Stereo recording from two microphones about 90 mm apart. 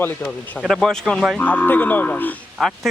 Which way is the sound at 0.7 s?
5° left (ahead or behind).